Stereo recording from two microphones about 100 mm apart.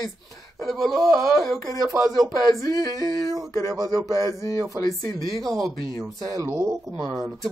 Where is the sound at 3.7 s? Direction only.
35° right (ahead or behind).